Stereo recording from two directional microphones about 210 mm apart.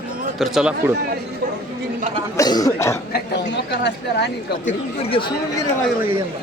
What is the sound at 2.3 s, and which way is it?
Speech, 15° left (ahead or behind).